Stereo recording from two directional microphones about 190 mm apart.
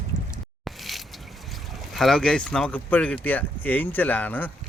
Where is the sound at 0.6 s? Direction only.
Centre (ahead or behind).